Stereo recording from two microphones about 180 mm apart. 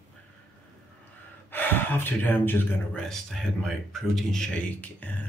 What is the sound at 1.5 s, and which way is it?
Speech, 10° left (ahead or behind).